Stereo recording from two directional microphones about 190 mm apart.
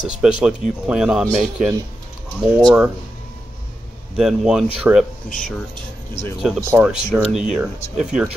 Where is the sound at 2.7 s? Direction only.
5° right (ahead or behind).